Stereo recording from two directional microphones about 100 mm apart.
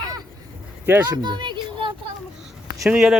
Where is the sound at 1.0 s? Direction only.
45° right (ahead or behind).